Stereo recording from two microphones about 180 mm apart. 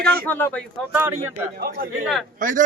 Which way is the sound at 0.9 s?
15° right (ahead or behind).